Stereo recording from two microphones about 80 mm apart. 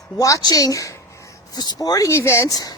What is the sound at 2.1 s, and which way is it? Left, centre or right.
Speech, left.